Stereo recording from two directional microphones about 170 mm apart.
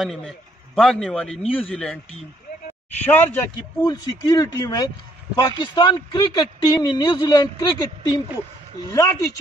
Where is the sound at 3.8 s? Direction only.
20° left (ahead or behind).